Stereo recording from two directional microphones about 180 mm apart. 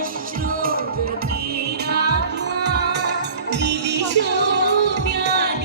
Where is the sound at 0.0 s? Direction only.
50° right (ahead or behind).